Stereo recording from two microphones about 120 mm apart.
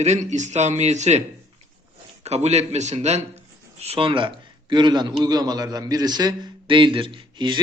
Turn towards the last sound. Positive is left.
turn(degrees=-40)  # may be behind; listen again after turning